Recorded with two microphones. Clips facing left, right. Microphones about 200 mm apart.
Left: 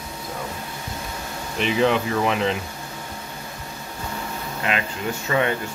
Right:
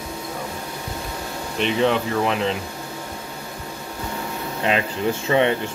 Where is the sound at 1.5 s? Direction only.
Centre (ahead or behind).